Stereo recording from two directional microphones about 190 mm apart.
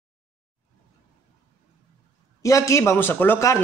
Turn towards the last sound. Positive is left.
turn(degrees=15)  # may be behind; listen again after turning